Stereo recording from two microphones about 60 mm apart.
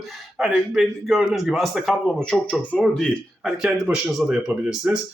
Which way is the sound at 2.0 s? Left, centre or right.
Centre.